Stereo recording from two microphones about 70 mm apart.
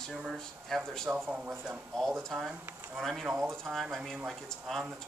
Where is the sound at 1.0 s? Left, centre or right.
Right.